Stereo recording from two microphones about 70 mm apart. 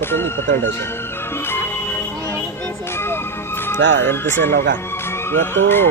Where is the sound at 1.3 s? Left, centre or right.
Left.